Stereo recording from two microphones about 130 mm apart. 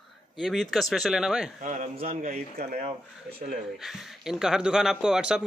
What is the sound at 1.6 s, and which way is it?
Speech, 80° right.